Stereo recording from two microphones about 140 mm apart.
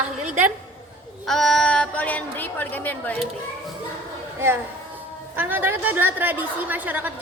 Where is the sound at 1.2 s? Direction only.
Centre (ahead or behind).